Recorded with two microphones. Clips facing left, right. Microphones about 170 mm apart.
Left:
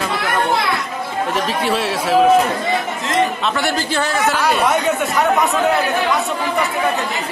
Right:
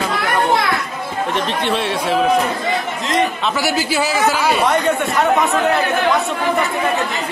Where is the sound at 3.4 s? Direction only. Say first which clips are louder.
Right 1 dB; 5° right (ahead or behind).